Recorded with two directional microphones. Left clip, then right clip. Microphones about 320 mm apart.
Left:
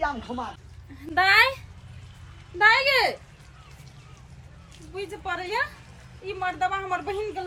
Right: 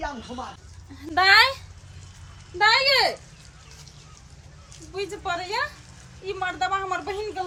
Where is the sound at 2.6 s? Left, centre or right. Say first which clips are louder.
Even; centre.